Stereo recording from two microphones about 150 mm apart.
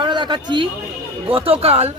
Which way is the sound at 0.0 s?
30° right (ahead or behind).